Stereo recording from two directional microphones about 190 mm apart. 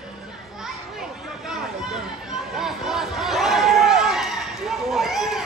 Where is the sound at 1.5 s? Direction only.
5° right (ahead or behind).